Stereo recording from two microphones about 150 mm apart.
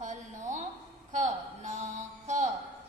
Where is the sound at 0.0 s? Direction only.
55° right (ahead or behind).